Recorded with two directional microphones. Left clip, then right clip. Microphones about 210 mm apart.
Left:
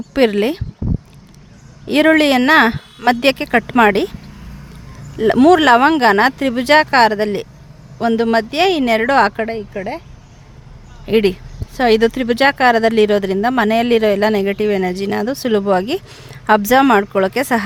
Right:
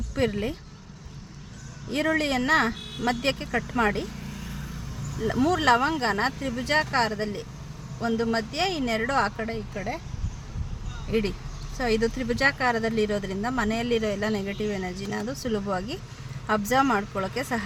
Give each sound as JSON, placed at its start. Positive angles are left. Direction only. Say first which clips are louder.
{"t": 0.1, "sound": "speech", "louder": "left 13 dB", "side_deg": 50}
{"t": 1.9, "sound": "speech", "louder": "left 13 dB", "side_deg": 50}
{"t": 5.2, "sound": "speech", "louder": "left 13 dB", "side_deg": 50}
{"t": 11.1, "sound": "speech", "louder": "left 13 dB", "side_deg": 50}